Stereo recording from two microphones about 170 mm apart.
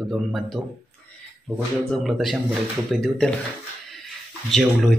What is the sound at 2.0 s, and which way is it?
Speech, centre (ahead or behind).